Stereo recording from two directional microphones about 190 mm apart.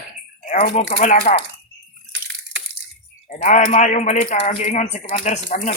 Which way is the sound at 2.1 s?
70° right (ahead or behind).